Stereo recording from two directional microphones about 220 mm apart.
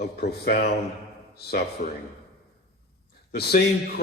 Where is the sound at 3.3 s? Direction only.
45° left (ahead or behind).